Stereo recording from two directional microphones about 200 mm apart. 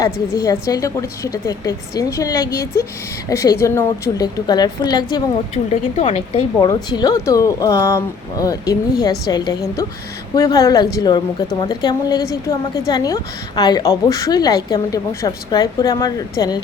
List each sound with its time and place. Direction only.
0.0 s a woman's voice: 20° left (ahead or behind)
6.0 s speech: 30° left (ahead or behind)